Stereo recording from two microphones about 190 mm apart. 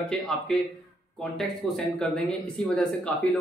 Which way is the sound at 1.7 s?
5° left (ahead or behind).